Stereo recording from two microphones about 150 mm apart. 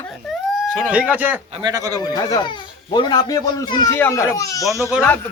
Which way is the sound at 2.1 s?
25° left (ahead or behind).